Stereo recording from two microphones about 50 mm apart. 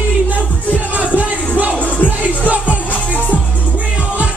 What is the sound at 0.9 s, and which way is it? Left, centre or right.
Music, right.